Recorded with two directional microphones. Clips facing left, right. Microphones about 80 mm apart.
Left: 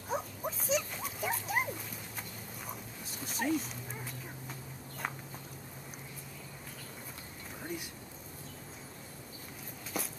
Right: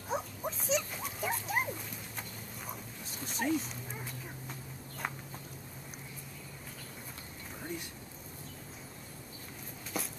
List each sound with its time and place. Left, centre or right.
0.1 s dog: centre
5.0 s a sound: centre
9.9 s walk: centre